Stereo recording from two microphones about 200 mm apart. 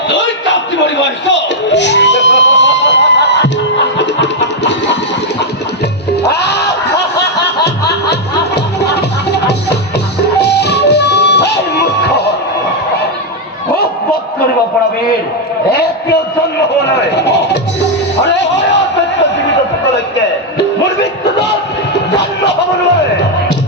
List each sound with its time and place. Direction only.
0.1 s a sound: 65° left (ahead or behind)
3.9 s music: 60° left (ahead or behind)
6.2 s music: 55° left (ahead or behind)
16.9 s a sound: 55° left (ahead or behind)
21.2 s crowd: 55° left (ahead or behind)
21.9 s music: 60° left (ahead or behind)